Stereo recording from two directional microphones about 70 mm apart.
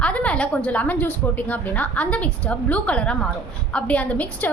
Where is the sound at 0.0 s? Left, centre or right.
Centre.